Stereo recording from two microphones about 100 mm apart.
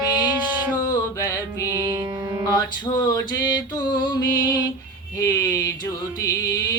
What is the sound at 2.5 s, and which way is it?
Music, 40° left (ahead or behind).